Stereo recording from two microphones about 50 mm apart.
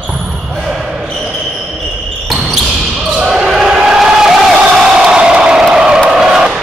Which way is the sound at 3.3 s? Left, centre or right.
Centre.